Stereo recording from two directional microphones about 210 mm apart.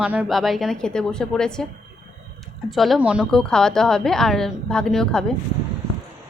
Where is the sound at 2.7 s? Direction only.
Centre (ahead or behind).